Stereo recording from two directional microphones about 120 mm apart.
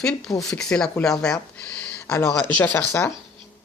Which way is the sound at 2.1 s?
20° left (ahead or behind).